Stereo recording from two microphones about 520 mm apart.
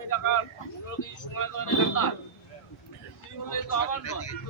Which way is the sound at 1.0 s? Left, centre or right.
Left.